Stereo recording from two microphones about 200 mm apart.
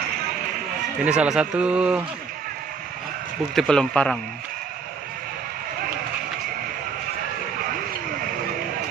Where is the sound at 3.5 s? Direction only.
Centre (ahead or behind).